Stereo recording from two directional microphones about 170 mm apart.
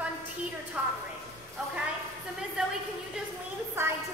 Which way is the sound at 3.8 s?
15° right (ahead or behind).